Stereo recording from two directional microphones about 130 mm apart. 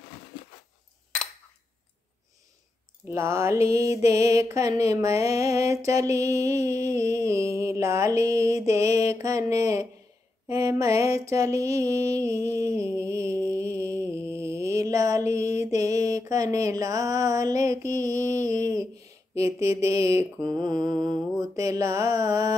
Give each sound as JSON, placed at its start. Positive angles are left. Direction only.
{"t": 3.1, "sound": "mantra", "side_deg": -20}